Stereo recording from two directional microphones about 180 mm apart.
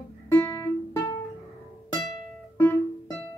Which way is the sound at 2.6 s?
10° left (ahead or behind).